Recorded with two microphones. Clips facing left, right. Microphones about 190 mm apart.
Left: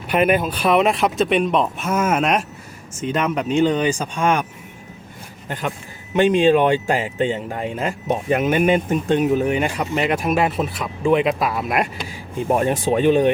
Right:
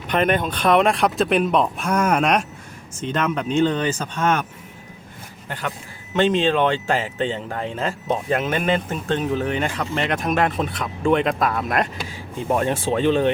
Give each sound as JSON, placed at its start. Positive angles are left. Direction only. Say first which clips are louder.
{"t": 0.1, "sound": "speech", "louder": "left 2 dB", "side_deg": 10}
{"t": 5.5, "sound": "speech", "louder": "left 3 dB", "side_deg": 15}